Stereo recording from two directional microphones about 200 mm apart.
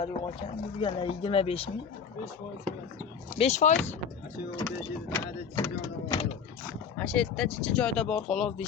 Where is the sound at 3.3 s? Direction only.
35° left (ahead or behind).